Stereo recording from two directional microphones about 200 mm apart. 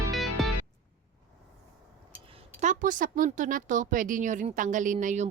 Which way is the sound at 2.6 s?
40° right (ahead or behind).